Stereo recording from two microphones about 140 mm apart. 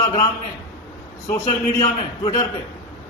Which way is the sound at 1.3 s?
35° left (ahead or behind).